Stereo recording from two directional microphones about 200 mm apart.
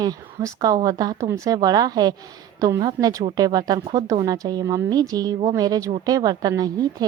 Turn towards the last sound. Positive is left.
turn(degrees=-20)  # may be behind; listen again after turning